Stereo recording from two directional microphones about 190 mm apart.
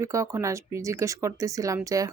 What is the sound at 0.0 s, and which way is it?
Speech, 15° right (ahead or behind).